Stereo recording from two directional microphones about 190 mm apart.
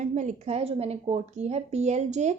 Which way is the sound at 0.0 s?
40° right (ahead or behind).